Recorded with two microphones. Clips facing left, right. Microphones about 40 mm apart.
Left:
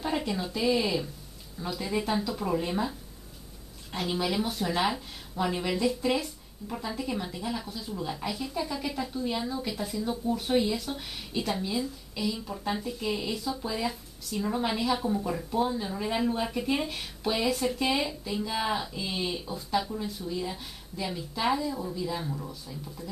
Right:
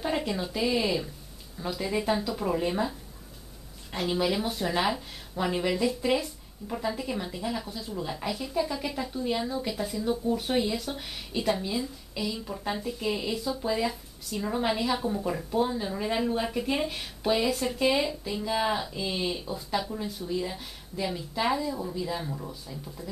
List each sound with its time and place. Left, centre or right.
0.0 s speech: centre